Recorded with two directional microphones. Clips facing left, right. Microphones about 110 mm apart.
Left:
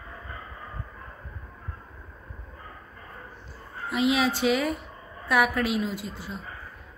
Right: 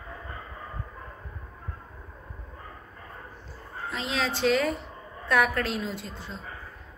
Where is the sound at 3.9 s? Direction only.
10° left (ahead or behind).